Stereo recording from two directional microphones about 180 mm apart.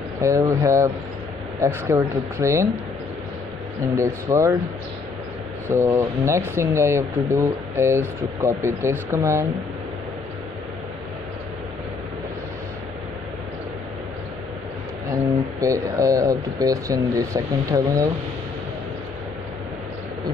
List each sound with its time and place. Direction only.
0.2 s speech: 15° right (ahead or behind)
3.9 s speech: 15° right (ahead or behind)
5.7 s speech: 15° right (ahead or behind)
15.6 s speech: 20° right (ahead or behind)